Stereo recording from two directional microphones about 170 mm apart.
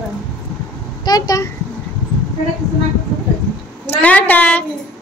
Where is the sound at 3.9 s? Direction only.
10° left (ahead or behind).